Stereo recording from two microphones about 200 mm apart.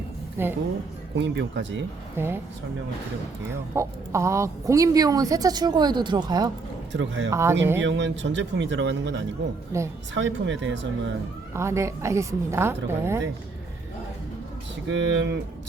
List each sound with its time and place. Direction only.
0.4 s speech: 10° right (ahead or behind)
1.1 s speech: 60° right (ahead or behind)
2.1 s speech: 10° right (ahead or behind)
3.4 s speech: 15° right (ahead or behind)
6.9 s speech: 65° right (ahead or behind)
7.3 s speech: 15° right (ahead or behind)
7.8 s speech: 65° right (ahead or behind)
9.7 s speech: 15° right (ahead or behind)
10.2 s speech: 65° right (ahead or behind)
11.5 s speech: 15° right (ahead or behind)
14.8 s speech: 65° right (ahead or behind)